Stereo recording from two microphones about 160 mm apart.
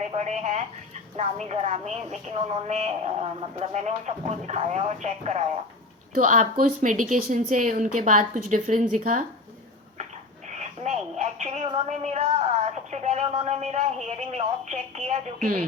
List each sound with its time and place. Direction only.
0.1 s speech: 45° right (ahead or behind)
10.5 s a sound: 45° right (ahead or behind)
12.9 s speech: 45° right (ahead or behind)